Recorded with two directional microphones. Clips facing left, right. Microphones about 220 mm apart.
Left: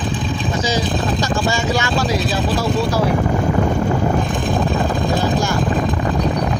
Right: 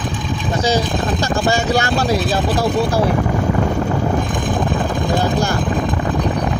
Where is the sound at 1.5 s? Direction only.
60° right (ahead or behind).